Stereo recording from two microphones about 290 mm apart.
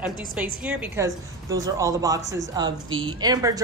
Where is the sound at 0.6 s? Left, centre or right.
Centre.